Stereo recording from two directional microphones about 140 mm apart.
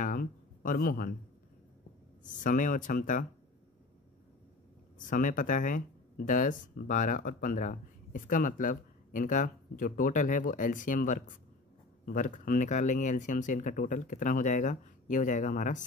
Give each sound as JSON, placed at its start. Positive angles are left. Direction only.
{"t": 0.0, "sound": "a sound", "side_deg": 90}
{"t": 2.2, "sound": "speech", "side_deg": 65}
{"t": 4.9, "sound": "speech", "side_deg": 70}